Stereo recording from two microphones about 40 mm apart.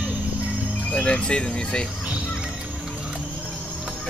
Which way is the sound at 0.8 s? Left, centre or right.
Left.